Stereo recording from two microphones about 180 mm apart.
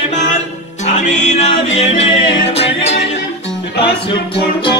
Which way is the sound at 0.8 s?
40° left (ahead or behind).